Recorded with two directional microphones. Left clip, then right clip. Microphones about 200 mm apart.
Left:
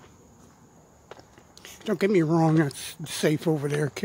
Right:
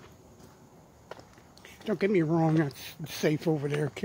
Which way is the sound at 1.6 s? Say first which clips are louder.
Left 4 dB; 25° left (ahead or behind).